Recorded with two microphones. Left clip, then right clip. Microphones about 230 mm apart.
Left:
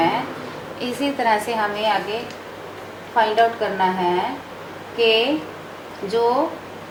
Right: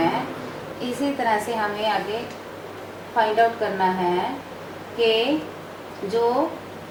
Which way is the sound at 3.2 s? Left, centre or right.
Centre.